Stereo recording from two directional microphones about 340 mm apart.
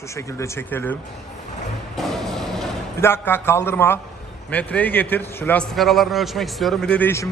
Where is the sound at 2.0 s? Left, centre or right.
Centre.